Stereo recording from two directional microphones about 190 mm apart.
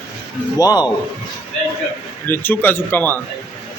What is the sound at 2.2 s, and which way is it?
Speech, 10° left (ahead or behind).